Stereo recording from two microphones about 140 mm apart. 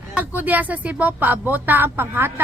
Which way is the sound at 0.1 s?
10° right (ahead or behind).